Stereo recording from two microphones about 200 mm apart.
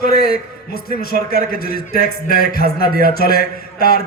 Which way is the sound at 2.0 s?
50° left (ahead or behind).